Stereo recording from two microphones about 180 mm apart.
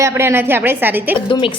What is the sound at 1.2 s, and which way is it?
Speech, 25° left (ahead or behind).